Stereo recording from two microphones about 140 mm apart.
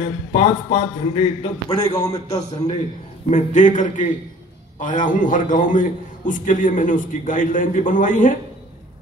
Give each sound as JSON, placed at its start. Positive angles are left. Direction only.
{"t": 0.3, "sound": "a man's voice", "side_deg": 45}
{"t": 2.3, "sound": "a man's voice", "side_deg": 30}
{"t": 3.3, "sound": "a man's voice", "side_deg": 60}